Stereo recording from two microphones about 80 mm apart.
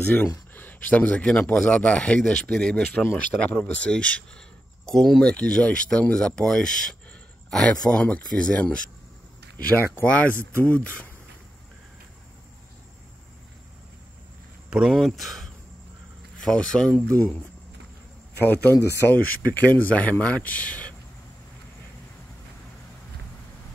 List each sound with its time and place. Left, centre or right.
0.0 s speech: left
10.0 s speech: centre
14.7 s speech: centre
18.4 s speech: left